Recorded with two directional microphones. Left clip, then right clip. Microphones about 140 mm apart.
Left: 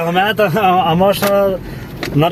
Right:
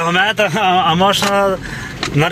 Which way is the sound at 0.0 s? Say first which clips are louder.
Even; centre (ahead or behind).